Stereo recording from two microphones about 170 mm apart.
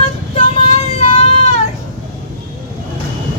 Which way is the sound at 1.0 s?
35° left (ahead or behind).